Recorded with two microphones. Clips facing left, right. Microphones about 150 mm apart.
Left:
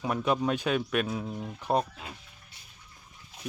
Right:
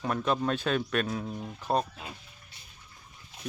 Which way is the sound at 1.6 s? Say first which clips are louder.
Left 1 dB; 15° left (ahead or behind).